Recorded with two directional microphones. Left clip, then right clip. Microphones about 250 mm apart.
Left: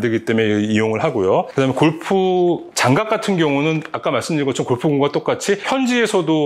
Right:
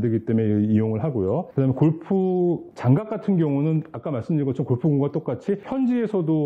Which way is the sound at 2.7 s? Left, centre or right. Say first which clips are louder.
Left 9 dB; centre.